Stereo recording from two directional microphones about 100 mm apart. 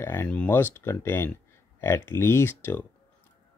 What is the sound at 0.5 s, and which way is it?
Speech, 25° left (ahead or behind).